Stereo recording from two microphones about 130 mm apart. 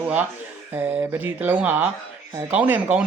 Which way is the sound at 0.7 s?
15° right (ahead or behind).